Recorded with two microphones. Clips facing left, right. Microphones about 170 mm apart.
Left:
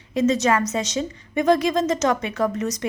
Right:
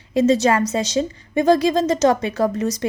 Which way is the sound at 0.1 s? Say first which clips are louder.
Right 3 dB; 30° right (ahead or behind).